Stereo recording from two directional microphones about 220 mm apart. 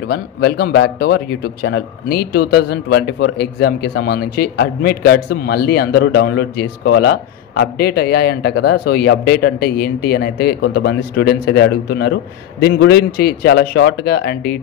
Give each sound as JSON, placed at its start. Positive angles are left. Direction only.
{"t": 0.1, "sound": "speech", "side_deg": 45}